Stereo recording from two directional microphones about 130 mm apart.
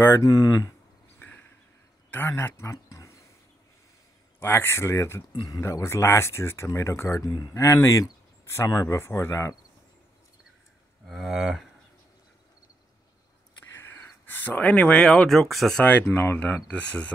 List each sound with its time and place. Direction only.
0.0 s speech: 25° left (ahead or behind)
1.2 s a sound: 15° left (ahead or behind)
2.0 s speech: 15° left (ahead or behind)
4.4 s speech: 15° left (ahead or behind)
11.1 s a sound: centre (ahead or behind)
13.7 s speech: 20° left (ahead or behind)